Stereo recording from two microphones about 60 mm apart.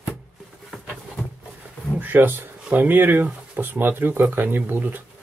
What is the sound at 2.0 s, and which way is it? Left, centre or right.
Speech, right.